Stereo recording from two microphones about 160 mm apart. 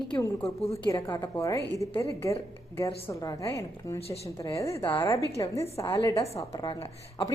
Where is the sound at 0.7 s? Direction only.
20° left (ahead or behind).